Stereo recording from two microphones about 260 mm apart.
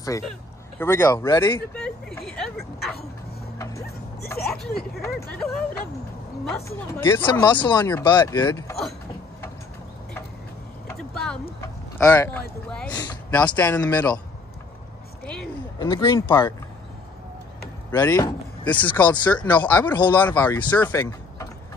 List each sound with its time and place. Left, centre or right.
0.7 s speech: centre
1.7 s vehicle: centre
4.3 s speech: centre
6.9 s speech: centre
10.9 s vehicle: centre
11.6 s speech: centre
15.8 s speech: centre
17.9 s speech: centre
19.5 s speech: centre
20.1 s speech: centre